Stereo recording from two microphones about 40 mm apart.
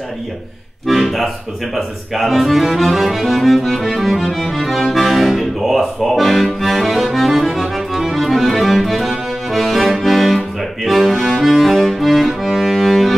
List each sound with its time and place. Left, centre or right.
0.8 s speech: centre
3.9 s music: centre